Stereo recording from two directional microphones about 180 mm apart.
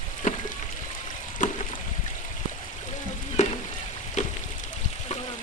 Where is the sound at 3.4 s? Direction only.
40° left (ahead or behind).